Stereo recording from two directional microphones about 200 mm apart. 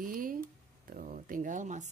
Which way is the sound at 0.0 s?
45° right (ahead or behind).